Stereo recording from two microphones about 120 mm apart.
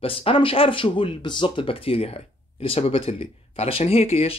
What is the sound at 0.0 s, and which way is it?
Speech, 50° left (ahead or behind).